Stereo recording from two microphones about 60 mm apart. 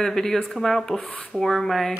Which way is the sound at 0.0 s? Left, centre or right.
Centre.